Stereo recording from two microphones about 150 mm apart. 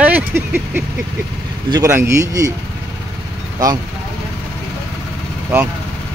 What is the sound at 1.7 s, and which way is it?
Speech, 20° right (ahead or behind).